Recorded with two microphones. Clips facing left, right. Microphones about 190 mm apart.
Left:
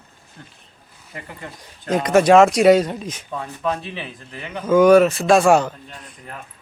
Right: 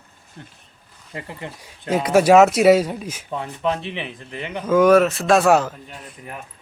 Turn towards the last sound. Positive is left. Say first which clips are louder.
# left 1 dB
turn(degrees=0)  # may be behind; listen again after turning